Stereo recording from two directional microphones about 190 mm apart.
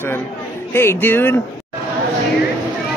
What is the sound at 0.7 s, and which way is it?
Speech, 10° left (ahead or behind).